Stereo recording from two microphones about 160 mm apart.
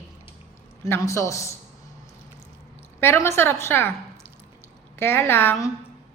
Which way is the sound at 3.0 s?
15° left (ahead or behind).